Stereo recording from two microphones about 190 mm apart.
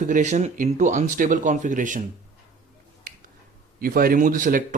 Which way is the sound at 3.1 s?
50° right (ahead or behind).